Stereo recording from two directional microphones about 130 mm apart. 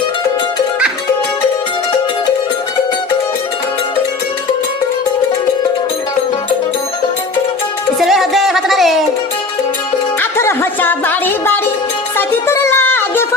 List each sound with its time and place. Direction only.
7.9 s music: centre (ahead or behind)
10.2 s music: 20° left (ahead or behind)